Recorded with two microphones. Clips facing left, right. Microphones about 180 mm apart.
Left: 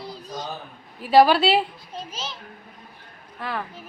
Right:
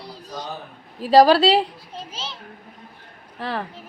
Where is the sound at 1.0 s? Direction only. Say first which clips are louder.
Right 2 dB; 40° right (ahead or behind).